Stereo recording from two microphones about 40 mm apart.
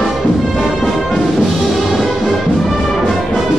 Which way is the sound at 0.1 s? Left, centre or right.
Centre.